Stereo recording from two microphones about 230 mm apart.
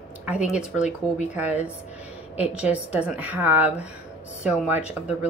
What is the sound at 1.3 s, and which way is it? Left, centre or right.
Speech, centre.